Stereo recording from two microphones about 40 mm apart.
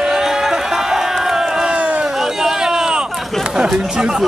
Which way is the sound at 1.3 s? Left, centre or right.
Centre.